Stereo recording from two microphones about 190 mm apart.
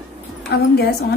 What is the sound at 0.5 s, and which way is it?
Speech, 55° left (ahead or behind).